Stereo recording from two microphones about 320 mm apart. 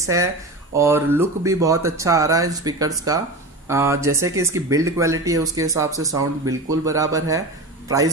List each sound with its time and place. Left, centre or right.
0.0 s a man's voice: centre